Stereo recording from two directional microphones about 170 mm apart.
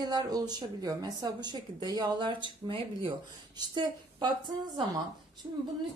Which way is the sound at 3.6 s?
25° right (ahead or behind).